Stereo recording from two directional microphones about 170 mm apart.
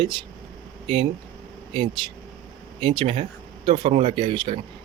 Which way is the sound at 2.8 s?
30° right (ahead or behind).